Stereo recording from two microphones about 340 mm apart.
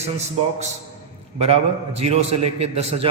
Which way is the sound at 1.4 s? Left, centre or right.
Centre.